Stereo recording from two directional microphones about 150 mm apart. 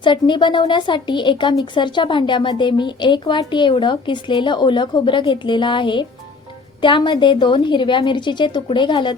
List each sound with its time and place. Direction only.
0.0 s speech: 30° left (ahead or behind)